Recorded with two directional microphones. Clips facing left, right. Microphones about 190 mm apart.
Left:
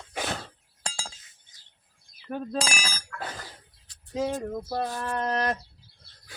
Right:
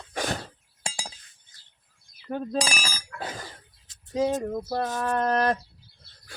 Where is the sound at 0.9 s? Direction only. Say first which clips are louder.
Right 1 dB; 20° right (ahead or behind).